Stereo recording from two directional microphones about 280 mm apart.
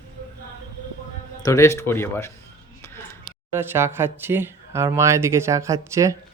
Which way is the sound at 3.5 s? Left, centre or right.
Centre.